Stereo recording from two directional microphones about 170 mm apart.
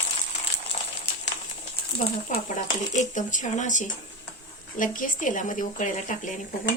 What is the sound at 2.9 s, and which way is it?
Speech, 45° left (ahead or behind).